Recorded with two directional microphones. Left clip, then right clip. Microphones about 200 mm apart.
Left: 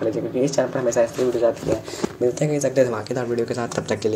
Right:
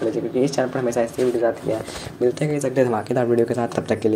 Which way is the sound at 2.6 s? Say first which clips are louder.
Even; 25° right (ahead or behind).